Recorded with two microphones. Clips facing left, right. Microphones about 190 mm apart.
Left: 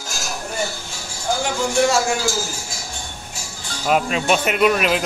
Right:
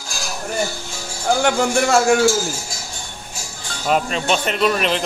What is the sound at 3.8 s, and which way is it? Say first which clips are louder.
Speech: left 1 dB; 5° left (ahead or behind).